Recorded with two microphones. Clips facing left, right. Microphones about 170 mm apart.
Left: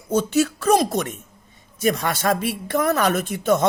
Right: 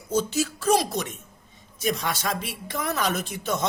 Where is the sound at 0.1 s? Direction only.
60° left (ahead or behind).